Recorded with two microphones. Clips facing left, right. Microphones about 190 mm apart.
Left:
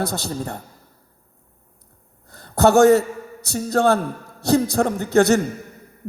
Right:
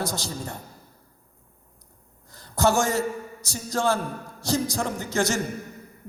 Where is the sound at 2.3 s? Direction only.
60° left (ahead or behind).